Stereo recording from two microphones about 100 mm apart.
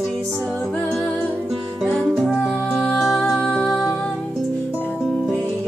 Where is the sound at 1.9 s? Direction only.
5° left (ahead or behind).